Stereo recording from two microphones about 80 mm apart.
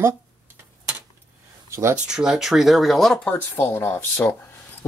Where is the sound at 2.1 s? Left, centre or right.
Centre.